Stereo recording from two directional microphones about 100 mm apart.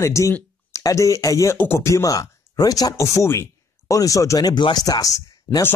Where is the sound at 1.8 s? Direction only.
35° left (ahead or behind).